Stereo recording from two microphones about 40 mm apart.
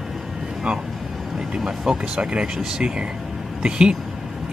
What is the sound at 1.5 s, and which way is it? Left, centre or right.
Speech, centre.